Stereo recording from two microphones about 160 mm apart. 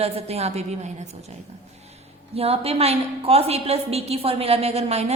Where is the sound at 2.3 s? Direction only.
40° right (ahead or behind).